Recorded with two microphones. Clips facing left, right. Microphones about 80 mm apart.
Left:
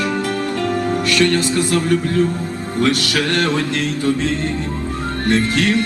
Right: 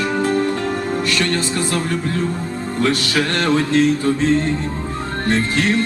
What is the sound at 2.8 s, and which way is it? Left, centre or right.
Music, right.